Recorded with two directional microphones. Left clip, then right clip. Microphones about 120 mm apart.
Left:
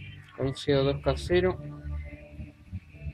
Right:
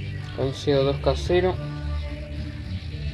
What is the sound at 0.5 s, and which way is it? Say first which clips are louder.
Speech: right 4 dB; 20° left (ahead or behind).